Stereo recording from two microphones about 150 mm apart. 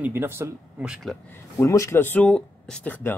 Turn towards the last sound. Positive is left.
turn(degrees=10)  # may be behind; listen again after turning